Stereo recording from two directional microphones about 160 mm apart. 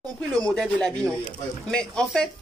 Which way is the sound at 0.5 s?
5° left (ahead or behind).